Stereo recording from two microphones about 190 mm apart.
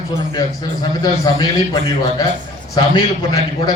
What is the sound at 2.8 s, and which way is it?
Speech, 20° left (ahead or behind).